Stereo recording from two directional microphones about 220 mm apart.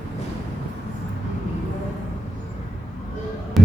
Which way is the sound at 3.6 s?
Centre (ahead or behind).